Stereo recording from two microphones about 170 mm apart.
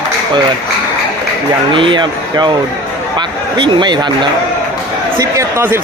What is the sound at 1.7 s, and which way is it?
A man's voice, 30° right (ahead or behind).